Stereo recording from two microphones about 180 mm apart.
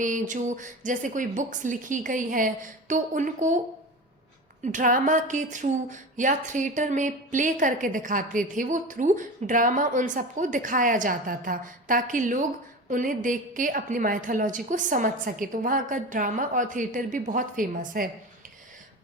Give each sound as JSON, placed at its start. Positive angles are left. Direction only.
{"t": 0.0, "sound": "a woman's voice", "side_deg": -45}
{"t": 4.6, "sound": "a woman's voice", "side_deg": -45}